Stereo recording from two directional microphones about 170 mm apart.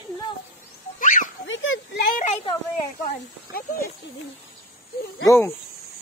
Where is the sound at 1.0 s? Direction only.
50° left (ahead or behind).